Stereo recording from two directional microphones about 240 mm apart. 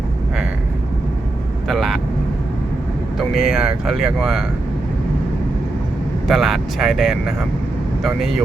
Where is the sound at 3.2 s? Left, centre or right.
Centre.